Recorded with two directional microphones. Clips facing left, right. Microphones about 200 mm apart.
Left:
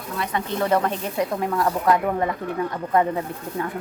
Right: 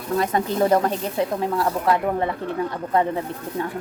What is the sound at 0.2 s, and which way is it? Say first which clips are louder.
Speech: right 4 dB; 40° right (ahead or behind).